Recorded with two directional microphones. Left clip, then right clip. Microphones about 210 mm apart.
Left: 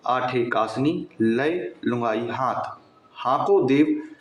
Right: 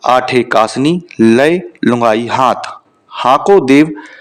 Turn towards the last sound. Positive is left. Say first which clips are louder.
# right 11 dB
turn(degrees=-55)  # may be behind; listen again after turning